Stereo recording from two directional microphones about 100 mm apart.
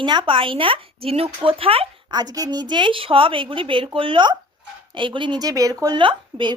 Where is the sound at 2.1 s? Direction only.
40° right (ahead or behind).